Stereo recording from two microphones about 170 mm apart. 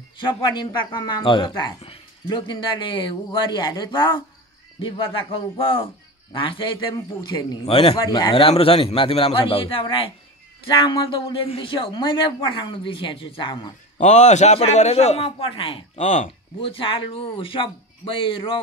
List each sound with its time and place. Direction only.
0.2 s a man's voice: 25° left (ahead or behind)
13.9 s a man's voice: 45° left (ahead or behind)
16.7 s a man's voice: 30° left (ahead or behind)